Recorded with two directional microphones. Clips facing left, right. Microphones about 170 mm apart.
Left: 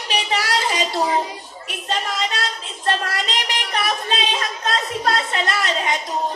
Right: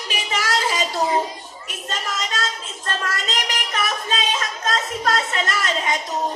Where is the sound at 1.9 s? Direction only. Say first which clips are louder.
Left 4 dB; 45° right (ahead or behind).